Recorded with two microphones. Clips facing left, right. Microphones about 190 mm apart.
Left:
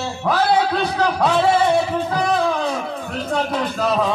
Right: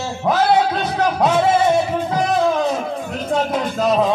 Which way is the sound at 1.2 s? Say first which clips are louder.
Right 1 dB; 20° right (ahead or behind).